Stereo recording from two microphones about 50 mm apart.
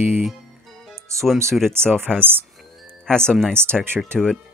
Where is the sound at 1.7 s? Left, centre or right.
Right.